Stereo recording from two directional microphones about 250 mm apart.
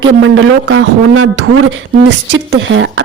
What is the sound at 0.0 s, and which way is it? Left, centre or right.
Speech, right.